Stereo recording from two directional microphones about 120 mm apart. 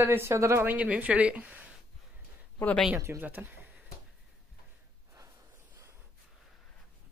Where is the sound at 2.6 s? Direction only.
15° left (ahead or behind).